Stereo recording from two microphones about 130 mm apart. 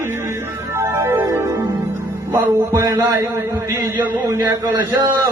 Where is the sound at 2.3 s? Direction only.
25° right (ahead or behind).